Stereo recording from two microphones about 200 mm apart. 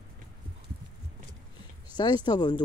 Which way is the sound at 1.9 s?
20° left (ahead or behind).